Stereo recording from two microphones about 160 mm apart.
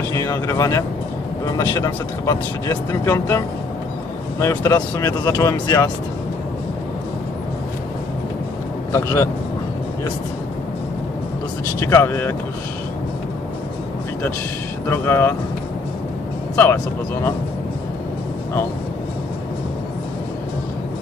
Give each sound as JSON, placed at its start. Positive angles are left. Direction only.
{"t": 0.1, "sound": "speech", "side_deg": 20}
{"t": 8.9, "sound": "speech", "side_deg": 20}
{"t": 11.8, "sound": "speech", "side_deg": 15}
{"t": 14.9, "sound": "speech", "side_deg": 15}
{"t": 16.5, "sound": "speech", "side_deg": 15}